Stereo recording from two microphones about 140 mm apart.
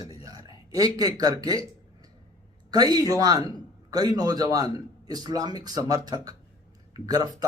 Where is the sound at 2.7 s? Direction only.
25° right (ahead or behind).